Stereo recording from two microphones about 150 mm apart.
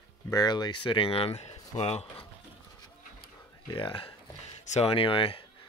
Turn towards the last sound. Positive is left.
turn(degrees=35)  # may be behind; listen again after turning